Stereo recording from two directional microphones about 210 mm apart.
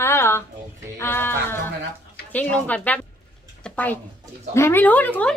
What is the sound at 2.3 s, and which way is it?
Speech, 10° left (ahead or behind).